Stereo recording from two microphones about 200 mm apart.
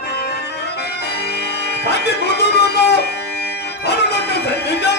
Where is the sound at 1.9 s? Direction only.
55° left (ahead or behind).